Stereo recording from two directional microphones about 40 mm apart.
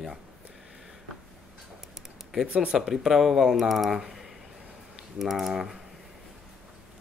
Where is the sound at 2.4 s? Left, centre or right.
Right.